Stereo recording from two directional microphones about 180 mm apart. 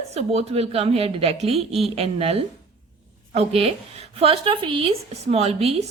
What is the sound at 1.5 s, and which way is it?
Speech, centre (ahead or behind).